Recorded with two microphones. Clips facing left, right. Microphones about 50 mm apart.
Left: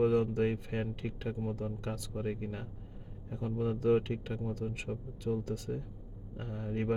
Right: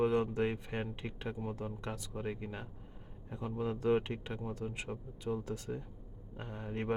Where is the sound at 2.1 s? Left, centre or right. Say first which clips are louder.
Left 3 dB; centre.